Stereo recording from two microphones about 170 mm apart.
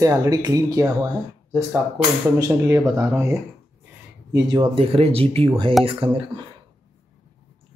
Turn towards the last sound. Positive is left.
turn(degrees=-30)  # may be behind; listen again after turning